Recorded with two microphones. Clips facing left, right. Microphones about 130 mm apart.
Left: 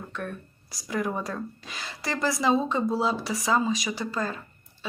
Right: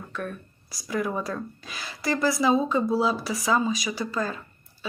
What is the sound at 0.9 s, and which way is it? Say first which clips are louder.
Speech: right 1 dB; 25° left (ahead or behind).